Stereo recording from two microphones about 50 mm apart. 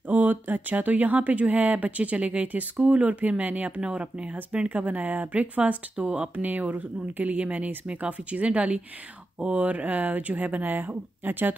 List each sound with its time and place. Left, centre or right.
0.1 s speech: right
4.6 s speech: right